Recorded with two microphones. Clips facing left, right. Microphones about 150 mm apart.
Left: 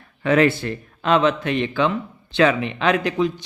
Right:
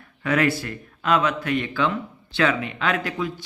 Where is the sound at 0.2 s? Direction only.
25° left (ahead or behind).